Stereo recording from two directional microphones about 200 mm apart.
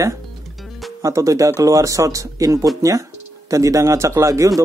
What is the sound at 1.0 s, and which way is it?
Speech, 15° right (ahead or behind).